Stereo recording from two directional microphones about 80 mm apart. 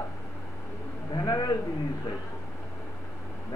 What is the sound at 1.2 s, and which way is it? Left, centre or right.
Speech, left.